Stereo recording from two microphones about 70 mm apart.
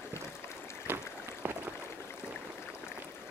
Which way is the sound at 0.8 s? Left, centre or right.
Right.